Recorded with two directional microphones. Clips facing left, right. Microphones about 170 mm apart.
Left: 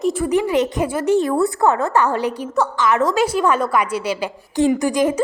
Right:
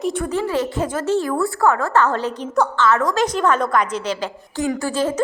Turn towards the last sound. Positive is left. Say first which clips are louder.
# left 3 dB
turn(degrees=15)  # may be behind; listen again after turning